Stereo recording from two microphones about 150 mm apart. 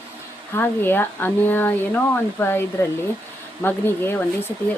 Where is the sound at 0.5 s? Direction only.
15° left (ahead or behind).